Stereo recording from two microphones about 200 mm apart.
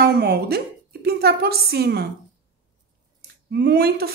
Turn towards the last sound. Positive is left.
turn(degrees=-50)  # may be behind; listen again after turning